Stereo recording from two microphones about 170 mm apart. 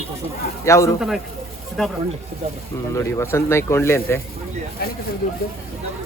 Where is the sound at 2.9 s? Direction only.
15° left (ahead or behind).